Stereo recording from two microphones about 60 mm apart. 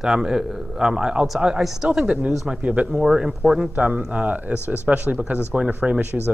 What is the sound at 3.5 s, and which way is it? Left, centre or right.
Speech, right.